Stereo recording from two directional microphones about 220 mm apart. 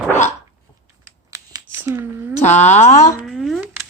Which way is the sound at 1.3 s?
15° right (ahead or behind).